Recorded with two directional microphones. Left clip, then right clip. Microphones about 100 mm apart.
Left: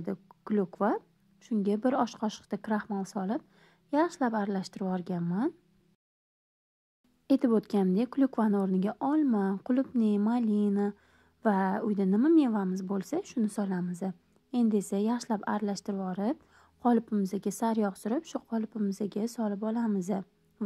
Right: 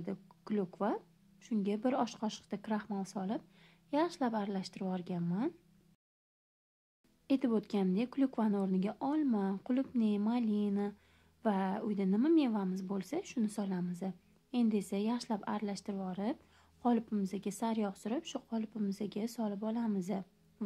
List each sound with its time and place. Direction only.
0.0 s a woman's voice: 30° left (ahead or behind)
7.2 s a woman's voice: 45° left (ahead or behind)